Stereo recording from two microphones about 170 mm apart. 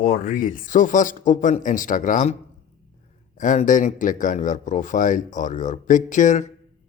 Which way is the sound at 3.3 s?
50° left (ahead or behind).